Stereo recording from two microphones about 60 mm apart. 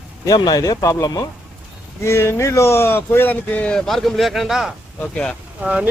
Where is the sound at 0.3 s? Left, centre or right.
Left.